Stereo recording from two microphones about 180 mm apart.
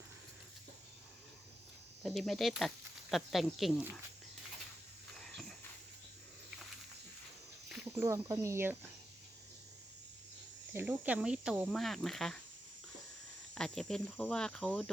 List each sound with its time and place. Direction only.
2.0 s speech: centre (ahead or behind)
5.1 s a sound: centre (ahead or behind)
8.0 s speech: 15° right (ahead or behind)
10.8 s speech: 10° right (ahead or behind)
13.5 s speech: 5° left (ahead or behind)